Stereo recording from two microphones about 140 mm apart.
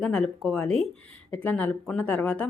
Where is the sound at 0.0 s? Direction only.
5° left (ahead or behind).